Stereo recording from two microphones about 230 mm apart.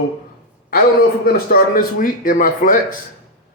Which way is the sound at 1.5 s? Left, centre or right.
Left.